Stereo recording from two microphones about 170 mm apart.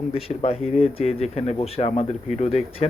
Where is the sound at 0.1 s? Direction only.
35° left (ahead or behind).